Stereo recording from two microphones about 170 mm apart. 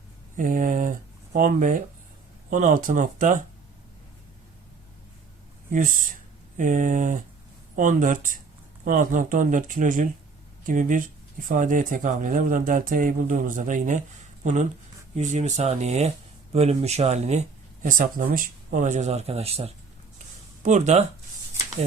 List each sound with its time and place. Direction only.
0.3 s speech: 50° right (ahead or behind)
5.7 s speech: 55° right (ahead or behind)
17.8 s speech: 50° right (ahead or behind)